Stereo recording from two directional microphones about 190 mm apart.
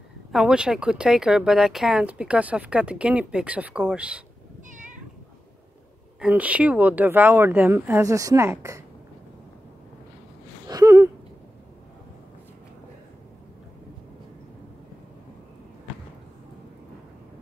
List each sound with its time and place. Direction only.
0.3 s speech: 5° right (ahead or behind)
4.6 s cat: 40° right (ahead or behind)
6.2 s speech: 5° right (ahead or behind)
10.7 s a sound: 15° right (ahead or behind)